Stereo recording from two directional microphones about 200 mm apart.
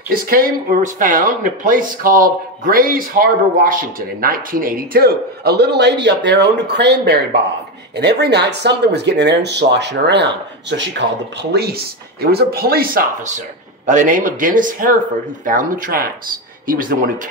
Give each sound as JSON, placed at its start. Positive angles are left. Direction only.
{"t": 0.1, "sound": "speech", "side_deg": -45}